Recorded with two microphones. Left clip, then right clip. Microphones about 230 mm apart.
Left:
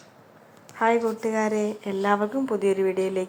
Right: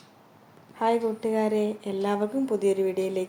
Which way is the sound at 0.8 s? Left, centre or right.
Centre.